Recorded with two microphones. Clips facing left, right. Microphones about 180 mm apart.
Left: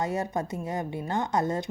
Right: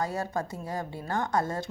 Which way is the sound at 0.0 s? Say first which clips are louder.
Left 2 dB; 20° left (ahead or behind).